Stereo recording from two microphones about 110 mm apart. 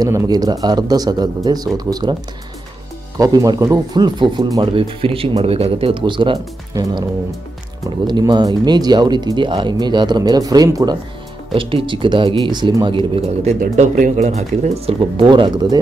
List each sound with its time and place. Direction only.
0.0 s speech: 30° right (ahead or behind)
3.2 s speech: 35° right (ahead or behind)
4.7 s speech: 55° right (ahead or behind); by 7.1 s 40° right (ahead or behind)
8.1 s speech: 40° right (ahead or behind)
11.5 s speech: 55° right (ahead or behind)
13.4 s speech: 90° right
15.0 s speech: 50° right (ahead or behind)